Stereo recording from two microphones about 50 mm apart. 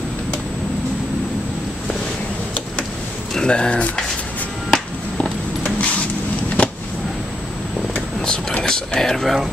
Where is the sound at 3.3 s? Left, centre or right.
Centre.